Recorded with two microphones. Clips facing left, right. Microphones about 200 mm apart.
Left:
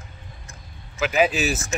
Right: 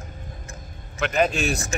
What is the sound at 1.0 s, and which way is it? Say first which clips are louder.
Speech: left 1 dB; 5° left (ahead or behind).